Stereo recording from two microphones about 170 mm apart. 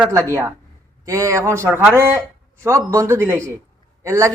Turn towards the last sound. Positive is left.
turn(degrees=-20)  # may be behind; listen again after turning